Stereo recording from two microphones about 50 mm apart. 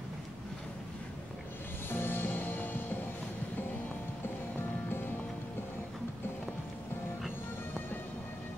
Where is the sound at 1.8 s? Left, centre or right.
Left.